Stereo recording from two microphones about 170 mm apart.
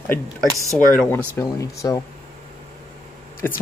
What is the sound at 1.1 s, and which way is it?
Speech, 15° left (ahead or behind).